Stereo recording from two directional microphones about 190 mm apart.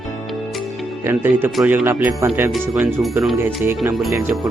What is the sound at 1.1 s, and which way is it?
Speech, 10° right (ahead or behind).